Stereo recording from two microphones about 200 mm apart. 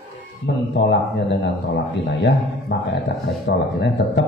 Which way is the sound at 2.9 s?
60° left (ahead or behind).